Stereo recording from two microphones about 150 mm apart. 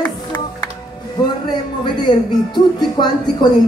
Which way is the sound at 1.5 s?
30° left (ahead or behind).